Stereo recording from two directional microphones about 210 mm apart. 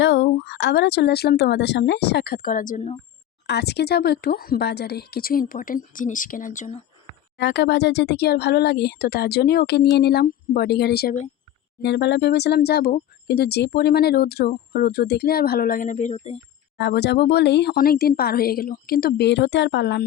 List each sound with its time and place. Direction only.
0.0 s speech: 60° left (ahead or behind); by 2.9 s 40° left (ahead or behind)
3.4 s speech: 50° left (ahead or behind); by 6.8 s 35° left (ahead or behind)
7.3 s speech: 55° left (ahead or behind); by 16.4 s 30° left (ahead or behind)
16.7 s speech: 55° left (ahead or behind)